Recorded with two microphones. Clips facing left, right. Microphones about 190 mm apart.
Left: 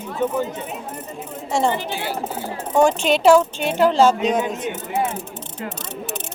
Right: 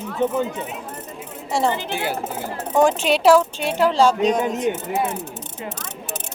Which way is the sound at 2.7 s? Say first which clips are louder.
Left 1 dB; centre (ahead or behind).